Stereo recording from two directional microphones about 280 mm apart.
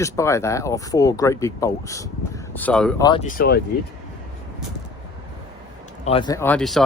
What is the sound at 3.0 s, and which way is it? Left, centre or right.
Speech, centre.